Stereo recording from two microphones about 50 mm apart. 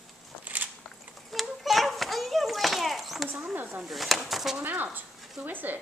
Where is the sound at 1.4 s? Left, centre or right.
Centre.